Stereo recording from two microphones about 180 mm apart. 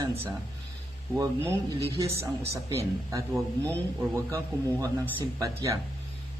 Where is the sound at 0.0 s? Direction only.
20° right (ahead or behind).